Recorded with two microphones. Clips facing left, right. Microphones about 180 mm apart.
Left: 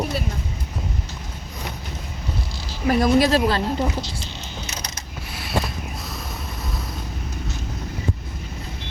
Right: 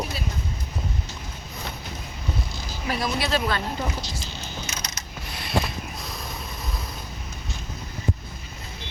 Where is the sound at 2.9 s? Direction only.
45° left (ahead or behind).